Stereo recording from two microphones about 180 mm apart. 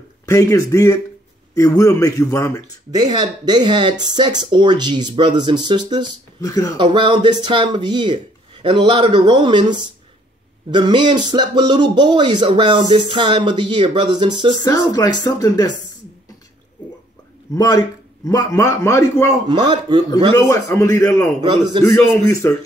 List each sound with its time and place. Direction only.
0.3 s a man's voice: 15° left (ahead or behind)
2.9 s speech: 20° right (ahead or behind)
6.4 s speech: 20° left (ahead or behind)
6.8 s speech: 25° right (ahead or behind)
14.6 s speech: 20° left (ahead or behind)
17.6 s a man's voice: 20° left (ahead or behind)
19.4 s speech: 25° right (ahead or behind)
20.4 s a man's voice: 15° left (ahead or behind)
21.4 s speech: 25° right (ahead or behind)
21.8 s a man's voice: 15° left (ahead or behind)